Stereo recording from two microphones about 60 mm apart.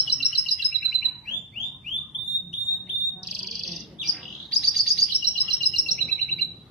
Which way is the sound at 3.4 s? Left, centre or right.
Centre.